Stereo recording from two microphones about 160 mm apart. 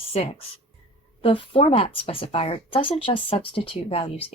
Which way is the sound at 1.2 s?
35° left (ahead or behind).